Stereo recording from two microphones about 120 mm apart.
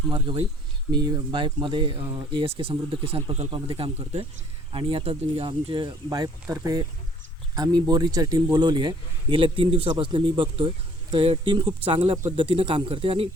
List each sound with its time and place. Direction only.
0.1 s speech: 45° right (ahead or behind)
6.2 s speech: 30° right (ahead or behind); by 13.2 s 50° right (ahead or behind)